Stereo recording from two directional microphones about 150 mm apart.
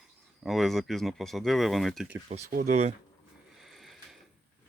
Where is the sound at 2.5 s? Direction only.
65° right (ahead or behind).